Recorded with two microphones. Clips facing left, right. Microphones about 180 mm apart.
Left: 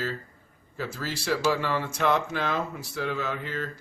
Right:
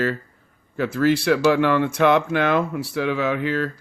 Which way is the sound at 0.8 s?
65° right (ahead or behind).